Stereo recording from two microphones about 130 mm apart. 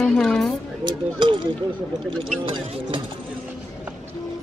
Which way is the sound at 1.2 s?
35° right (ahead or behind).